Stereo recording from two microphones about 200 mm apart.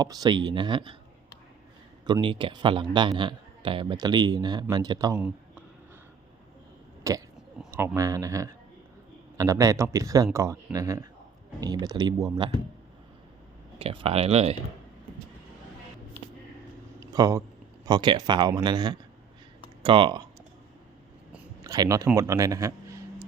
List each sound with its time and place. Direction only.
0.0 s speech: 20° right (ahead or behind)
2.0 s speech: 20° right (ahead or behind)
5.1 s a sound: 5° right (ahead or behind)
7.1 s speech: 15° right (ahead or behind)
13.7 s speech: 25° right (ahead or behind)
17.0 s a sound: 20° right (ahead or behind)
17.8 s speech: 20° right (ahead or behind)
21.6 s speech: 20° right (ahead or behind)